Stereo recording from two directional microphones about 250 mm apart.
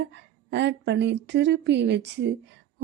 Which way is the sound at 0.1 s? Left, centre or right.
Right.